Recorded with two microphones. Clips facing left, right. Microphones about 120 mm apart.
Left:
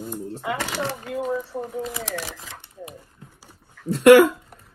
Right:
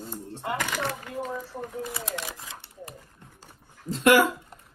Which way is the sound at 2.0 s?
80° left.